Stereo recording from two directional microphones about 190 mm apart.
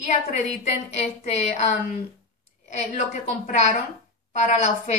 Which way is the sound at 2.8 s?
40° left (ahead or behind).